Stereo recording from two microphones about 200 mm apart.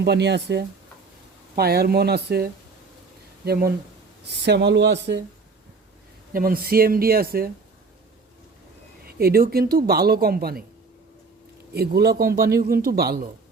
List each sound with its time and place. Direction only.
0.0 s speech: 60° right (ahead or behind)
6.3 s speech: 45° right (ahead or behind)
9.0 s speech: 50° right (ahead or behind)
11.7 s speech: 55° right (ahead or behind)